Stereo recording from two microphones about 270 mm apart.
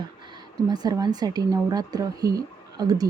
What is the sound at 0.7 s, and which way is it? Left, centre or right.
Speech, centre.